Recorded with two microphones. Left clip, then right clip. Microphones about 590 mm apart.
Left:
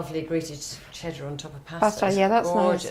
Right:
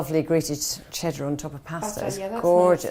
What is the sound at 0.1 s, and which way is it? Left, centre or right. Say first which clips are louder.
Speech: right 7 dB; right.